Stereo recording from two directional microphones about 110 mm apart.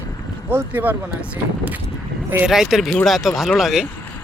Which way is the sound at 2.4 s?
5° right (ahead or behind).